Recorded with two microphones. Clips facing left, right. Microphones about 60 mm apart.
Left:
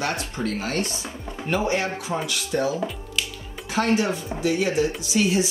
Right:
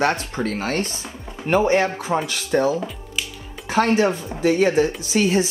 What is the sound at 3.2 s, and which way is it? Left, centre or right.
Music, centre.